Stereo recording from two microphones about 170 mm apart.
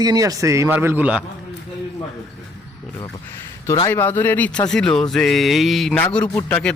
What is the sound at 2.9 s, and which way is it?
Speech, 15° left (ahead or behind).